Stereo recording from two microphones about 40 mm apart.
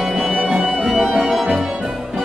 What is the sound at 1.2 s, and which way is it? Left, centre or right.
Organ, centre.